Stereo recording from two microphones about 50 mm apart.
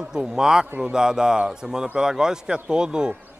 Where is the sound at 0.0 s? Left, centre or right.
Centre.